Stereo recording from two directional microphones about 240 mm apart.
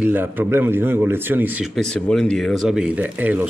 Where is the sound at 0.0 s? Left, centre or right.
Centre.